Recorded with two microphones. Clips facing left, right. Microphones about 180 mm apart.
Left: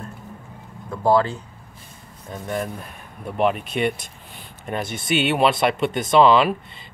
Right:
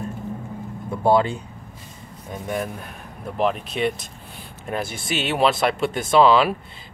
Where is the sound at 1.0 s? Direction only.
15° right (ahead or behind).